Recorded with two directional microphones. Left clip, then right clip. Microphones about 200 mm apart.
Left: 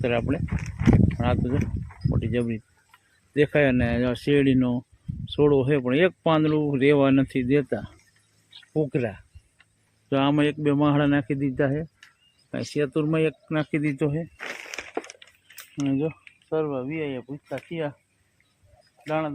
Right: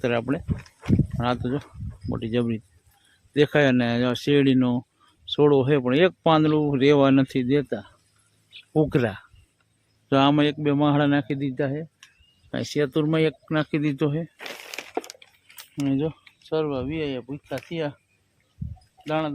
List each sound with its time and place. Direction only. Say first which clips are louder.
0.0 s a man's voice: even; 5° right (ahead or behind)
8.7 s speech: right 3 dB; 25° right (ahead or behind)
10.1 s a man's voice: right 3 dB; 10° right (ahead or behind); by 11.9 s 10° left (ahead or behind)
12.5 s speech: right 2 dB; 5° right (ahead or behind)
14.3 s a sound: left 1 dB; 15° right (ahead or behind)
15.7 s speech: right 1 dB; 5° right (ahead or behind)
19.0 s speech: right 1 dB; 5° right (ahead or behind)